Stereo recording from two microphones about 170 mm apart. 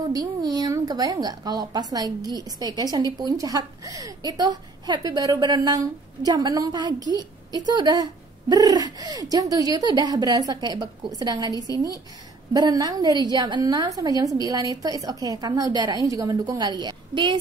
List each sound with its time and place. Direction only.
0.1 s a woman's voice: 25° right (ahead or behind)